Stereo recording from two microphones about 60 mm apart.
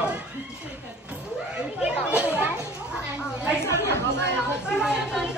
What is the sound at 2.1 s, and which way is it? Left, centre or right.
Children playing, right.